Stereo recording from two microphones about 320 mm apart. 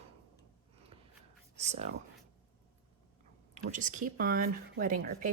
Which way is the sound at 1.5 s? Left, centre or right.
Right.